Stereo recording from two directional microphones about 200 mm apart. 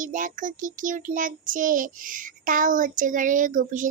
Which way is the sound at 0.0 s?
40° right (ahead or behind).